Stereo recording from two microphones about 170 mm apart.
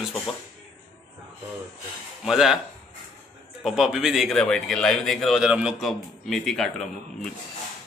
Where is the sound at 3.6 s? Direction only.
Centre (ahead or behind).